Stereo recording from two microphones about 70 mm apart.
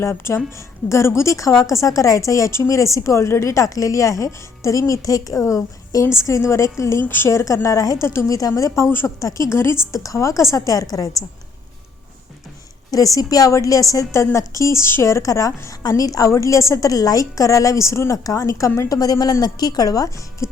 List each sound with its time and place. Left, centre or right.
0.0 s a woman's voice: left
7.0 s a woman's voice: left
7.3 s a woman's voice: left
9.5 s a woman's voice: left
10.0 s a woman's voice: left
12.9 s a woman's voice: left
18.2 s a woman's voice: left
20.4 s music: left